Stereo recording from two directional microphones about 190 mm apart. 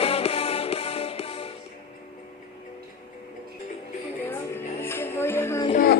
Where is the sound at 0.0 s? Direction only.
30° left (ahead or behind).